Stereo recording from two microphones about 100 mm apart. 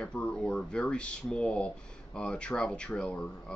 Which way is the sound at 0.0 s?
10° left (ahead or behind).